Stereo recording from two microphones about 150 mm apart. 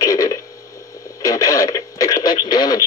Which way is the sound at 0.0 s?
20° left (ahead or behind).